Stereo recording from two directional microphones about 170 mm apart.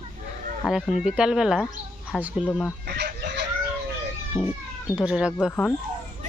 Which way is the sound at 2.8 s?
80° right.